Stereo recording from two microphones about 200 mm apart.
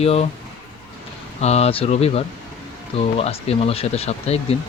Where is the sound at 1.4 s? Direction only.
30° left (ahead or behind).